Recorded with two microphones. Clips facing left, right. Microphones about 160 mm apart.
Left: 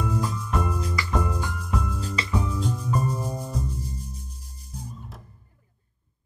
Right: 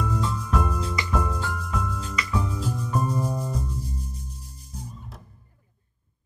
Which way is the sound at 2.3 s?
5° right (ahead or behind).